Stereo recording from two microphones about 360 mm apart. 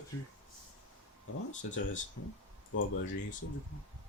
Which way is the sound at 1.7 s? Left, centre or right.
Left.